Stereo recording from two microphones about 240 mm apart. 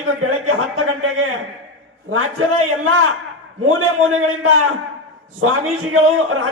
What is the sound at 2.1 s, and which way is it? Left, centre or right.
Speech, right.